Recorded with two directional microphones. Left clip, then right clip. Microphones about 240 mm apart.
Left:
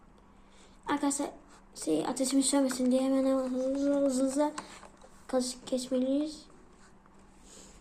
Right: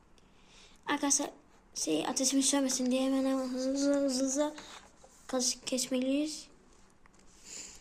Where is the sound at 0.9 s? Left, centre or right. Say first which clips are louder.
Even; centre.